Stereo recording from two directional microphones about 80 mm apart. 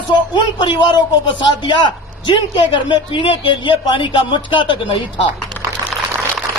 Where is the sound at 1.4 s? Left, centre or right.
Left.